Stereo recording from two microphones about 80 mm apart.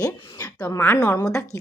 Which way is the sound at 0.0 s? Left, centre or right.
Left.